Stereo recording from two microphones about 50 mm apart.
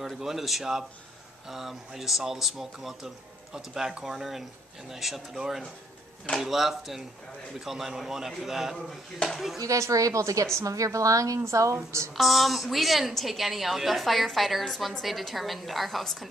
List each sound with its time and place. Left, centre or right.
0.0 s a woman's voice: centre
6.4 s a woman's voice: centre
8.7 s speech: centre
9.7 s a woman's voice: right
12.2 s a woman's voice: centre